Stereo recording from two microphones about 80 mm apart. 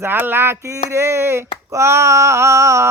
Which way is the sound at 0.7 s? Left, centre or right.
Right.